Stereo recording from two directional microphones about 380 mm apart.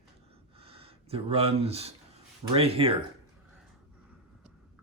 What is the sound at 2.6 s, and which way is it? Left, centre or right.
Speech, centre.